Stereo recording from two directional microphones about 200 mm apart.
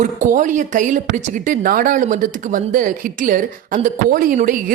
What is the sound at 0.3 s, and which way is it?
A woman's voice, 40° right (ahead or behind).